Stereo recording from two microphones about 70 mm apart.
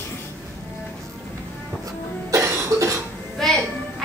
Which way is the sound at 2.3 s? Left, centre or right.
Right.